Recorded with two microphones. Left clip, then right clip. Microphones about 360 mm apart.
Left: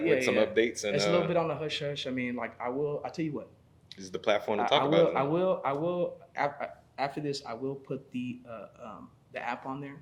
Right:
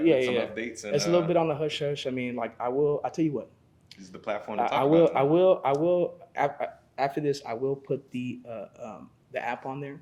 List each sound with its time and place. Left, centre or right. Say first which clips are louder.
0.3 s speech: left 3 dB; left
1.3 s speech: right 4 dB; right
4.0 s speech: left 5 dB; left
5.1 s speech: right 6 dB; right